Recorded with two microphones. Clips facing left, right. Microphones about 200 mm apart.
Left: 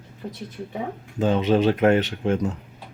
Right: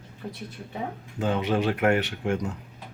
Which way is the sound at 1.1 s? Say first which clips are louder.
Left 5 dB; 20° left (ahead or behind).